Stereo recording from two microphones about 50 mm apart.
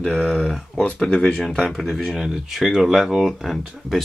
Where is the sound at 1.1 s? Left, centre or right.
Centre.